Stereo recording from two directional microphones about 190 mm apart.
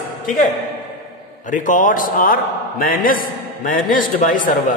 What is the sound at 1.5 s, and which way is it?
A man's voice, 40° left (ahead or behind).